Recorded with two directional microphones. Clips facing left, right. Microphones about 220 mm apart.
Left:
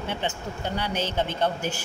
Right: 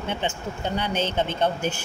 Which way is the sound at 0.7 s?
20° right (ahead or behind).